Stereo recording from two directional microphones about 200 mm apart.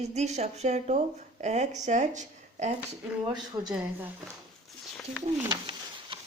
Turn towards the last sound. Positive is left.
turn(degrees=-25)  # may be behind; listen again after turning